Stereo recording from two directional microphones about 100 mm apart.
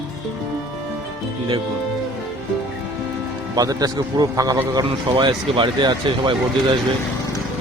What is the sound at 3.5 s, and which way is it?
Speech, 40° right (ahead or behind).